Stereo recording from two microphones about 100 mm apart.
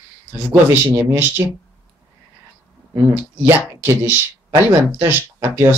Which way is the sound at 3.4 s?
25° right (ahead or behind).